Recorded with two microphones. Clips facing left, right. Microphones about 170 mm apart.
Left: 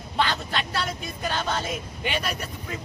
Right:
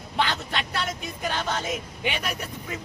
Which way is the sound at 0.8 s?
15° right (ahead or behind).